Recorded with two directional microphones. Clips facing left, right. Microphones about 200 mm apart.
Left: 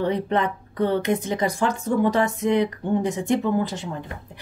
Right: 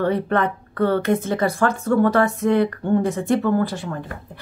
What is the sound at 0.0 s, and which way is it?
Speech, 15° left (ahead or behind).